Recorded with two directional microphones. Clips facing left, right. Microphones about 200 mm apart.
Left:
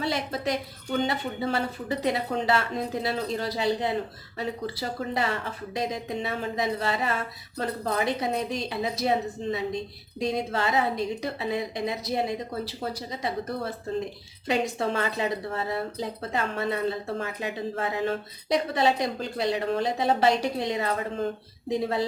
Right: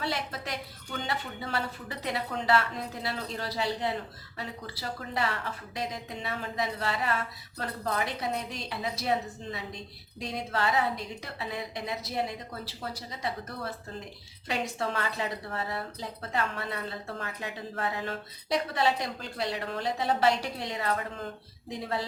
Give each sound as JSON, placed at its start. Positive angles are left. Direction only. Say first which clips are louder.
{"t": 0.0, "sound": "speech", "louder": "left 6 dB", "side_deg": 20}